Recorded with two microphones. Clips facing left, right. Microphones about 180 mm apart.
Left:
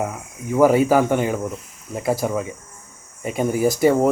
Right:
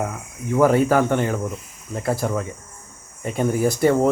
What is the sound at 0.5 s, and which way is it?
A man's voice, 10° left (ahead or behind).